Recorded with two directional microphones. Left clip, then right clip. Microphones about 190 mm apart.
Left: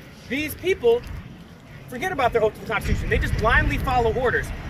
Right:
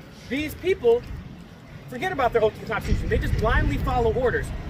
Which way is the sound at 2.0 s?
15° right (ahead or behind).